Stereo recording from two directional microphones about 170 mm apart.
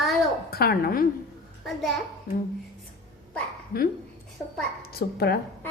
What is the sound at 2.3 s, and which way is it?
Speech, 65° left (ahead or behind).